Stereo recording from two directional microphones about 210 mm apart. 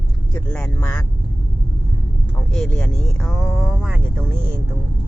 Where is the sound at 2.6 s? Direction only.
5° left (ahead or behind).